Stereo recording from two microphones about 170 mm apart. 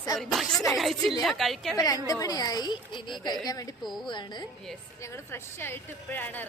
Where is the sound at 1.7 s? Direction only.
20° left (ahead or behind).